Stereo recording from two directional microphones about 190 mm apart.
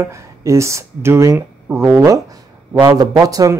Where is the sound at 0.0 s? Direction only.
15° right (ahead or behind).